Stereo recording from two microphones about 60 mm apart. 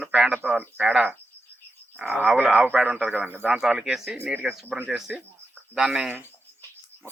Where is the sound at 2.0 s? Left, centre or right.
Right.